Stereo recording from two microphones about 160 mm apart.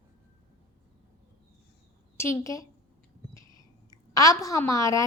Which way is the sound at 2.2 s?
20° left (ahead or behind).